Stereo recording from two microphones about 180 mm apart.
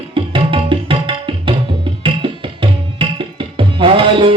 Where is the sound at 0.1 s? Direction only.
30° right (ahead or behind).